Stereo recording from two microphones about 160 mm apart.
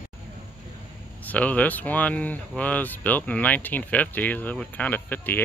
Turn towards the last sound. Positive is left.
turn(degrees=10)  # may be behind; listen again after turning